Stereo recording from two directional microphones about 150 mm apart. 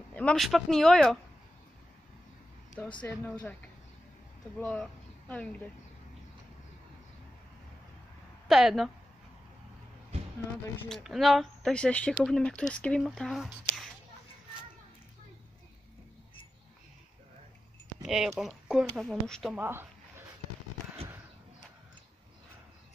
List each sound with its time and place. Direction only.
0.1 s speech: 10° left (ahead or behind)
3.0 s speech: 10° left (ahead or behind)
4.6 s speech: 10° left (ahead or behind)
8.5 s speech: centre (ahead or behind)
10.1 s a sound: 45° right (ahead or behind)
10.9 s speech: centre (ahead or behind)
18.0 s speech: centre (ahead or behind)
19.5 s a sound: 15° right (ahead or behind)